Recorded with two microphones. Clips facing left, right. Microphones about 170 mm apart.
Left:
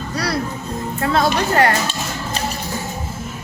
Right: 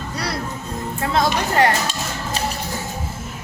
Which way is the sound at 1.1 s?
20° right (ahead or behind).